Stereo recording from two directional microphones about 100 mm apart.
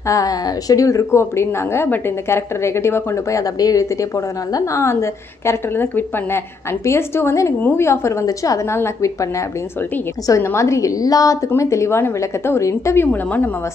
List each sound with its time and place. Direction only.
0.1 s a woman's voice: 35° left (ahead or behind); by 13.5 s 20° left (ahead or behind)